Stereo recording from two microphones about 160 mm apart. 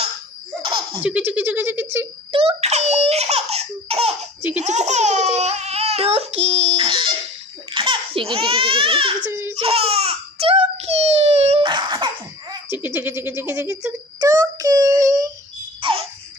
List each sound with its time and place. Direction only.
0.6 s laughter: 35° right (ahead or behind)
1.0 s speech: 10° right (ahead or behind)
2.3 s speech: 40° right (ahead or behind)
9.3 s baby cry: 15° right (ahead or behind)
9.6 s baby cry: 35° right (ahead or behind)
11.6 s cough: 30° right (ahead or behind)
12.7 s speech: 15° right (ahead or behind)
15.8 s baby laughter: 35° right (ahead or behind)